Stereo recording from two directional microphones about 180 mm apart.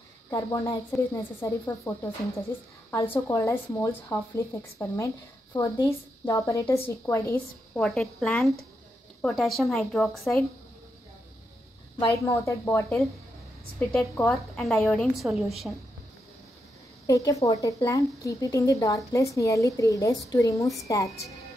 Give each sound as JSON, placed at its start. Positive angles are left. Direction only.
{"t": 0.3, "sound": "a woman's voice", "side_deg": 20}
{"t": 7.8, "sound": "a woman's voice", "side_deg": 0}
{"t": 12.0, "sound": "a woman's voice", "side_deg": 15}
{"t": 14.3, "sound": "a woman's voice", "side_deg": 0}
{"t": 17.0, "sound": "a woman's voice", "side_deg": 20}